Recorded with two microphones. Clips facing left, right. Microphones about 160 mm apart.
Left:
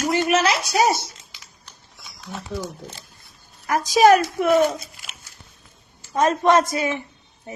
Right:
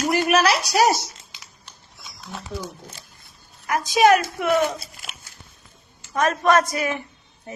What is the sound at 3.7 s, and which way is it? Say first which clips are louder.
Speech: left 2 dB; 45° left (ahead or behind).